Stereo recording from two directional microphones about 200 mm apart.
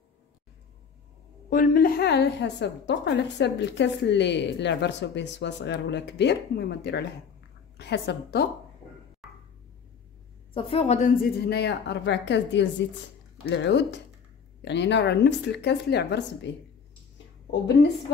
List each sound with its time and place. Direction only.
1.5 s a woman's voice: 45° left (ahead or behind)
9.2 s music: centre (ahead or behind)
10.5 s a woman's voice: 30° left (ahead or behind)
11.2 s a woman's voice: 55° left (ahead or behind)